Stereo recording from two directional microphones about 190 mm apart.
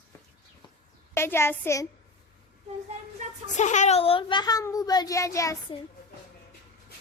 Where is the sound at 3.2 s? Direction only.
40° right (ahead or behind).